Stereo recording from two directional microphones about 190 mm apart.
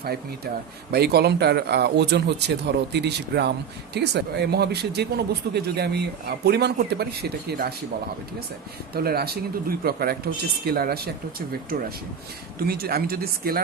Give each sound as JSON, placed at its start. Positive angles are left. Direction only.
{"t": 0.9, "sound": "speech", "side_deg": -60}
{"t": 9.0, "sound": "speech", "side_deg": -55}